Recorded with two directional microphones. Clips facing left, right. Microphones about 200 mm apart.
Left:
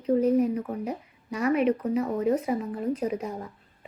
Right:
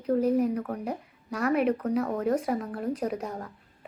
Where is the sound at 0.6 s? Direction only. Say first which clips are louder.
Left 1 dB; 10° left (ahead or behind).